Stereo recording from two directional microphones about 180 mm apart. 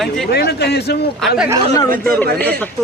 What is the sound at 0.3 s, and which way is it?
Speech, 65° left (ahead or behind).